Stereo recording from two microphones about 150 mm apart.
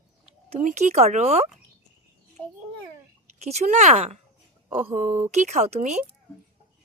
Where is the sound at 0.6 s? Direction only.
50° right (ahead or behind).